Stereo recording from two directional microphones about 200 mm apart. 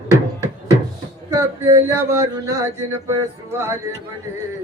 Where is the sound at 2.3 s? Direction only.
20° right (ahead or behind).